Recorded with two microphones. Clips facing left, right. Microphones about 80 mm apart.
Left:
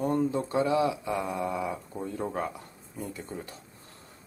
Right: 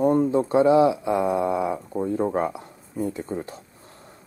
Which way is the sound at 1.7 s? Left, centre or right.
Right.